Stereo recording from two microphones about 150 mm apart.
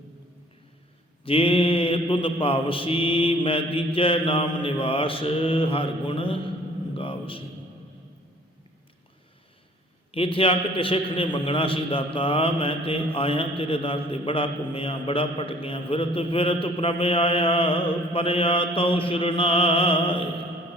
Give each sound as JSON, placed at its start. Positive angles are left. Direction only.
{"t": 1.2, "sound": "a man's voice", "side_deg": 35}
{"t": 6.9, "sound": "a sound", "side_deg": 35}
{"t": 10.1, "sound": "a man's voice", "side_deg": 40}